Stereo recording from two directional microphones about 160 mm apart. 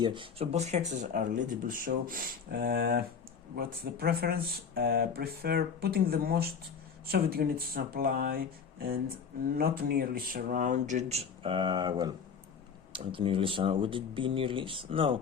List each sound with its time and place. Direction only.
0.0 s speech: 30° right (ahead or behind); by 3.0 s 85° right
3.5 s speech: 70° right (ahead or behind); by 15.2 s 35° right (ahead or behind)